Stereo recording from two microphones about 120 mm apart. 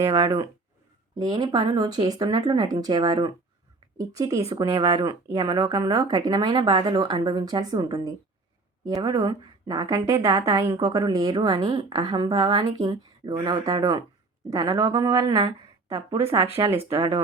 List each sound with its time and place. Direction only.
0.0 s a woman's voice: 25° right (ahead or behind)
1.2 s a woman's voice: 35° right (ahead or behind)